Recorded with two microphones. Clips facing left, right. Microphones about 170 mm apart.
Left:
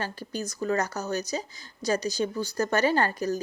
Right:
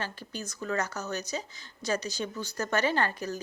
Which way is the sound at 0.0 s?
40° left (ahead or behind).